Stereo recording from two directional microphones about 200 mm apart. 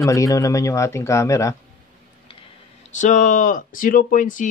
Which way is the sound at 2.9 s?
40° left (ahead or behind).